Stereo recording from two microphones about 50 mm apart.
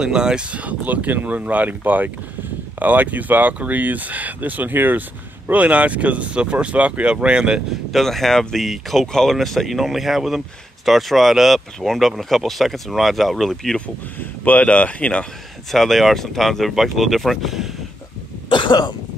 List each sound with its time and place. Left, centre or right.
0.0 s speech: centre; by 5.0 s right
5.5 s speech: right
7.9 s speech: centre
14.2 s speech: left
15.7 s speech: centre